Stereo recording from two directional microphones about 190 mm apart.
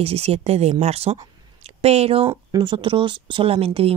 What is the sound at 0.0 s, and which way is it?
Speech, 30° right (ahead or behind).